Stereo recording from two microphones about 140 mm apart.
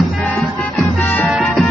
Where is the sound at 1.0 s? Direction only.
10° left (ahead or behind).